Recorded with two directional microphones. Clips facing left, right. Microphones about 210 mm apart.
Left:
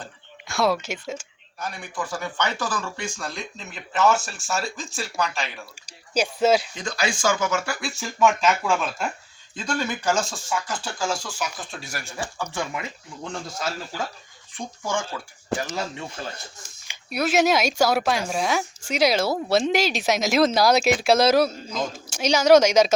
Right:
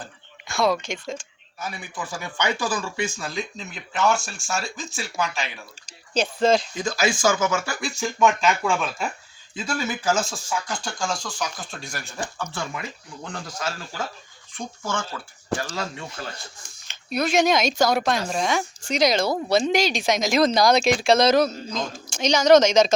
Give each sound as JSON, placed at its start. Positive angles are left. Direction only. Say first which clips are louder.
{"t": 0.4, "sound": "speech", "louder": "even", "side_deg": 0}
{"t": 1.5, "sound": "speech", "louder": "left 2 dB", "side_deg": -5}
{"t": 6.8, "sound": "speech", "louder": "right 3 dB", "side_deg": -5}
{"t": 15.5, "sound": "speech", "louder": "even", "side_deg": 15}
{"t": 16.9, "sound": "speech", "louder": "even", "side_deg": 10}